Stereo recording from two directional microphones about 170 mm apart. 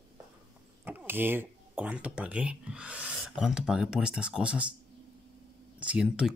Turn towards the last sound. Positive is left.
turn(degrees=-5)  # may be behind; listen again after turning